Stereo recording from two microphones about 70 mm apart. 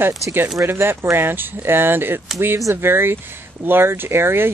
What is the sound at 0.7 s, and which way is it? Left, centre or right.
Speech, right.